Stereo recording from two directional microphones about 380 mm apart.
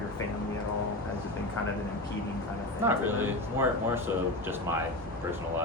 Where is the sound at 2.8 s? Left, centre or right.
Centre.